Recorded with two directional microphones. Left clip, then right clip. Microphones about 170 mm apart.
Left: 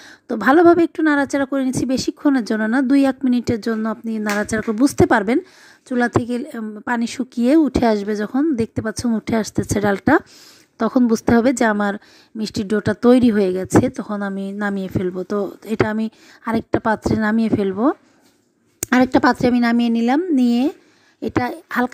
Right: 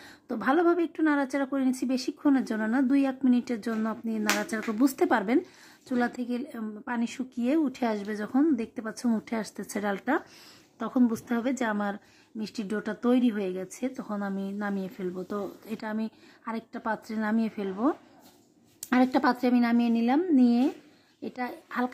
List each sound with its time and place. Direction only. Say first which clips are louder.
0.0 s a woman's voice: left 11 dB; 35° left (ahead or behind)